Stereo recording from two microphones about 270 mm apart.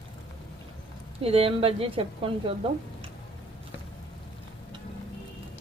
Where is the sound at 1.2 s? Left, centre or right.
Right.